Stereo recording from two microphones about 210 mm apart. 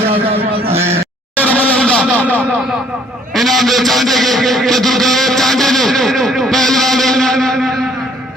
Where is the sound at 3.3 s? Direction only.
Centre (ahead or behind).